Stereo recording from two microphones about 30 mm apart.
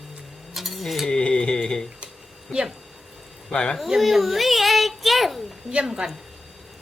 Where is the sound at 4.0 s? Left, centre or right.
Centre.